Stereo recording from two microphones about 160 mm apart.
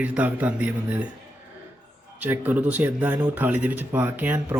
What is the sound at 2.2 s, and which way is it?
A man's voice, 10° right (ahead or behind).